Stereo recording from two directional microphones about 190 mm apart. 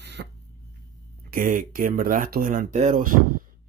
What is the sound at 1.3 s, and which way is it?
Speech, 45° right (ahead or behind).